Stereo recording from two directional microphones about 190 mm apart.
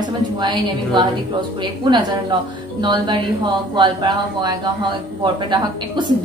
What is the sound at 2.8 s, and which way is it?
A woman's voice, 25° right (ahead or behind).